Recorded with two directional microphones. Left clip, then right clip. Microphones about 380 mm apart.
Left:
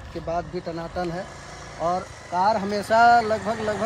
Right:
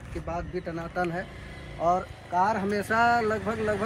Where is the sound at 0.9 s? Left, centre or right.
Centre.